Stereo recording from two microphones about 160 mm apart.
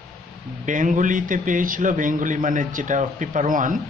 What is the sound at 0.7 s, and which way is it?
A man's voice, 55° right (ahead or behind).